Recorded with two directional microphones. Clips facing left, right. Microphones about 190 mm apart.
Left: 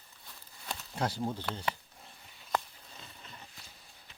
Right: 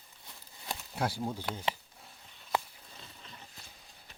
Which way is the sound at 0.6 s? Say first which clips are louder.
Even; 10° right (ahead or behind).